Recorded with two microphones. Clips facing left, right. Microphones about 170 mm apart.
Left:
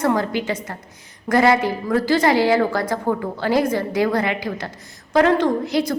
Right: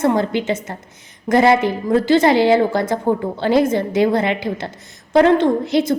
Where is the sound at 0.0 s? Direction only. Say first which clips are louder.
Right 3 dB; 25° right (ahead or behind).